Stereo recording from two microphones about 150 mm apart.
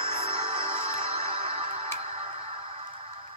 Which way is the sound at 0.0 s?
40° right (ahead or behind).